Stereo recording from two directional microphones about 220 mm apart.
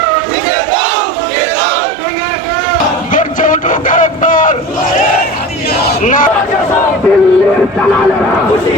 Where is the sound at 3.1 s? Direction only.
35° left (ahead or behind).